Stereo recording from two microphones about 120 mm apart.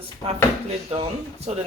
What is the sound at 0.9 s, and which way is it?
Speech, 60° right (ahead or behind).